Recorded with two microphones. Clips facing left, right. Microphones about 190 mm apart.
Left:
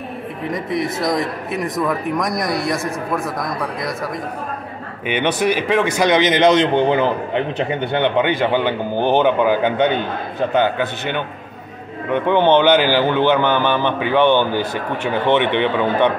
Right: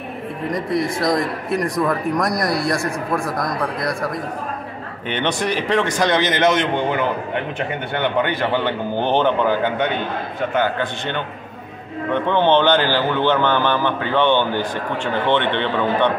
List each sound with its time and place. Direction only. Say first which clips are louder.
0.5 s a man's voice: right 1 dB; centre (ahead or behind)
5.0 s a man's voice: left 4 dB; 10° left (ahead or behind)
10.8 s a man's voice: left 2 dB; 10° left (ahead or behind)